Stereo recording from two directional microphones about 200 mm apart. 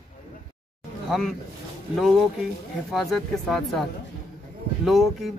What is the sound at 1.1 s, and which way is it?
Speech, centre (ahead or behind).